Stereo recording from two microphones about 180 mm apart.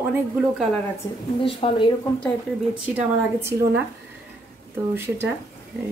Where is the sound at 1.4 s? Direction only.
30° left (ahead or behind).